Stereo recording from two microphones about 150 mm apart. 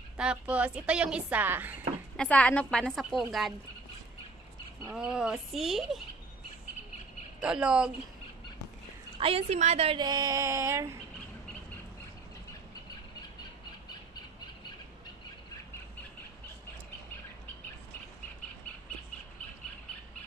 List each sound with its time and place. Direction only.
0.2 s a woman's voice: 5° right (ahead or behind)
2.1 s a woman's voice: 10° left (ahead or behind)
4.8 s a woman's voice: 5° right (ahead or behind)
7.4 s a woman's voice: 5° right (ahead or behind)
9.2 s a woman's voice: 40° right (ahead or behind)
9.9 s a sound: 30° right (ahead or behind)